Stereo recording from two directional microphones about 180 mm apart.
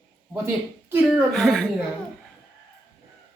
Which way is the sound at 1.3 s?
Centre (ahead or behind).